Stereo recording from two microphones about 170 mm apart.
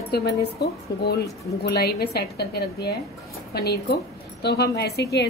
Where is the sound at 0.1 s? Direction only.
70° left (ahead or behind).